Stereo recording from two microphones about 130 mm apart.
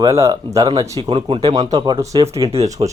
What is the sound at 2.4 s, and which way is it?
Speech, 50° right (ahead or behind).